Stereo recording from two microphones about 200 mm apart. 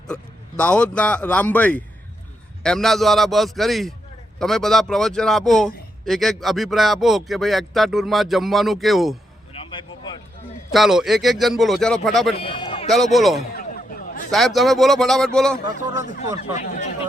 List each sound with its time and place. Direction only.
0.1 s speech: 5° left (ahead or behind)
9.5 s vehicle: 25° left (ahead or behind)
10.7 s speech: centre (ahead or behind)
12.3 s run: 25° left (ahead or behind)
12.9 s speech: centre (ahead or behind)
13.6 s a sound: 45° left (ahead or behind)
14.3 s speech: centre (ahead or behind)
16.6 s speech: 40° left (ahead or behind)